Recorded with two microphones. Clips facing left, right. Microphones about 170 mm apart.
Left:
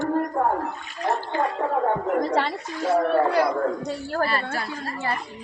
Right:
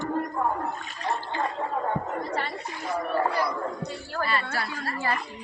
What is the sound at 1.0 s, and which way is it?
Water, 50° left (ahead or behind).